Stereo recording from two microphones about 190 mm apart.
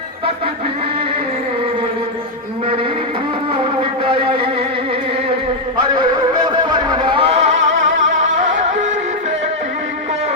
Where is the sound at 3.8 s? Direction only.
30° right (ahead or behind).